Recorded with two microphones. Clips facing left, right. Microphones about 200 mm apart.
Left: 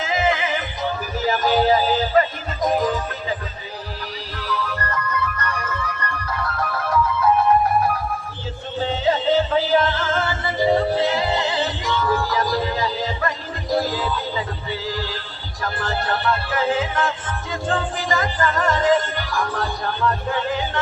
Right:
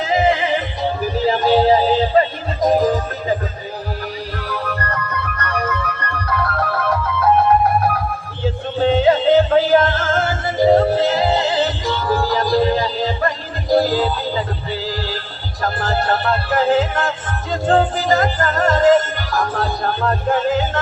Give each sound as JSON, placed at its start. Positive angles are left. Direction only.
{"t": 0.0, "sound": "music", "side_deg": -35}
{"t": 4.4, "sound": "music", "side_deg": -55}
{"t": 8.8, "sound": "music", "side_deg": -60}